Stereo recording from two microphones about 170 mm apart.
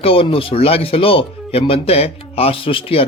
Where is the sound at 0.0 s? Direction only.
30° left (ahead or behind).